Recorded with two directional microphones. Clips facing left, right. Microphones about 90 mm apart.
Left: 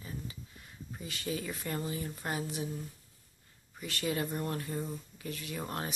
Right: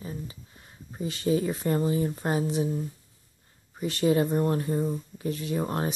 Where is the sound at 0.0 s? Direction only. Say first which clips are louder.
Right 6 dB; 30° right (ahead or behind).